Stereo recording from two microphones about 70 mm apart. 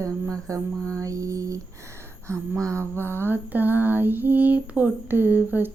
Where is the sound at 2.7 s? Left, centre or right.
Right.